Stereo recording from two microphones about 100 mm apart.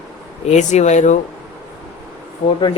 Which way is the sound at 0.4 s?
90° left.